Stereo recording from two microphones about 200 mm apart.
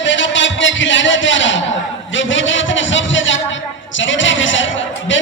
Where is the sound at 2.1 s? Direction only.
70° left (ahead or behind).